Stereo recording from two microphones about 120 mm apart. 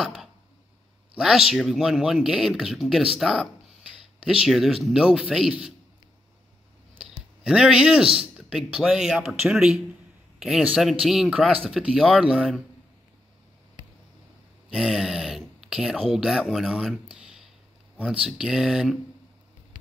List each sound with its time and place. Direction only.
0.0 s a sound: centre (ahead or behind)
1.1 s speech: 5° right (ahead or behind)
7.0 s clicking: 5° right (ahead or behind)
8.4 s speech: 5° right (ahead or behind)
14.7 s speech: centre (ahead or behind)